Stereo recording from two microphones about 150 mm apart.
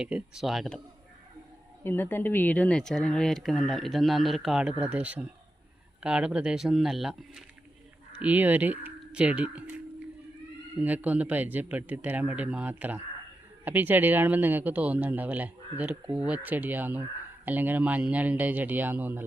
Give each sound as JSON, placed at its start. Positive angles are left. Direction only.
{"t": 0.0, "sound": "speech", "side_deg": -5}
{"t": 1.8, "sound": "speech", "side_deg": 15}